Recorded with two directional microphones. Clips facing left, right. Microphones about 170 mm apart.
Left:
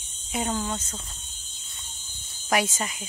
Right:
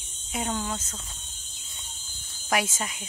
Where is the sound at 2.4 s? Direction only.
Centre (ahead or behind).